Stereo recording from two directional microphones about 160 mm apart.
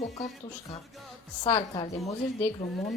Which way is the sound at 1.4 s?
30° left (ahead or behind).